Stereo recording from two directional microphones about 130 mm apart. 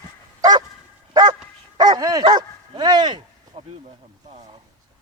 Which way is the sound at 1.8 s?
30° right (ahead or behind).